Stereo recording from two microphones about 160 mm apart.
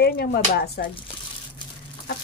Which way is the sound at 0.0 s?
85° left.